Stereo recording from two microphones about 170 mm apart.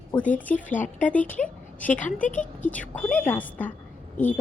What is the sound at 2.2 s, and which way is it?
Speech, 50° left (ahead or behind).